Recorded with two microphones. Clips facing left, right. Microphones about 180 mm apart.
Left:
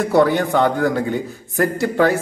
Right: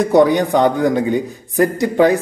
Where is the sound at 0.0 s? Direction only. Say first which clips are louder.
Right 3 dB; 15° right (ahead or behind).